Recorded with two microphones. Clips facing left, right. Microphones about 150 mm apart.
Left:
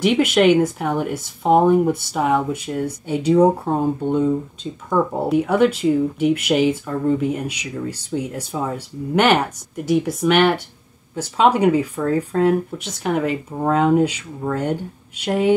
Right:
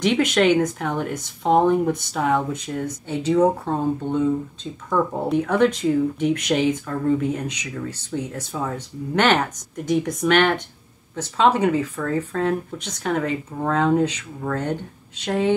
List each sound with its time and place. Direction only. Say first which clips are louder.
0.0 s speech: left 3 dB; 5° left (ahead or behind)